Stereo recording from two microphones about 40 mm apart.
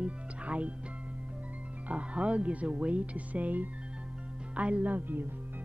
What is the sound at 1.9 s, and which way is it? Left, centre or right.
Speech, right.